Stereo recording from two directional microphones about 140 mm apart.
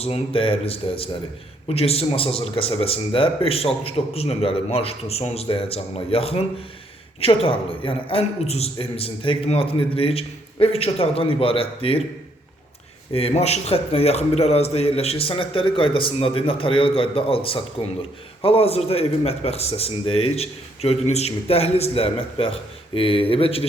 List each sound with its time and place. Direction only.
0.0 s a man's voice: 40° left (ahead or behind)
7.4 s a man's voice: 40° left (ahead or behind)
13.1 s a man's voice: 45° left (ahead or behind)